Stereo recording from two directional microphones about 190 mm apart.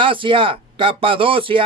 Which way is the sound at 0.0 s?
25° right (ahead or behind).